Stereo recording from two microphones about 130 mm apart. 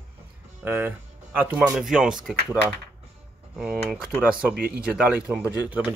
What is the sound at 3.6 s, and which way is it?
Speech, 10° right (ahead or behind).